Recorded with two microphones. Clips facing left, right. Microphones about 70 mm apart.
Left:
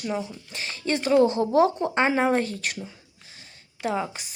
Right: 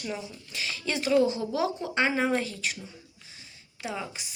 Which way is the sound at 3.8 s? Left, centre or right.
Left.